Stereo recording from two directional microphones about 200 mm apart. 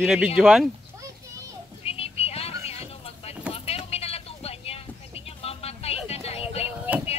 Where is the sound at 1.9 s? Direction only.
30° left (ahead or behind).